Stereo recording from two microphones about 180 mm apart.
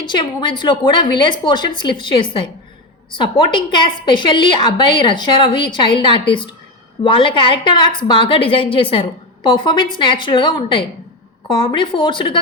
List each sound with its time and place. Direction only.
0.0 s a woman's voice: 25° left (ahead or behind)